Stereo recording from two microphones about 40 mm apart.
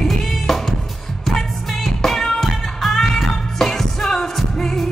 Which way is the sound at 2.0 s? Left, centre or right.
Centre.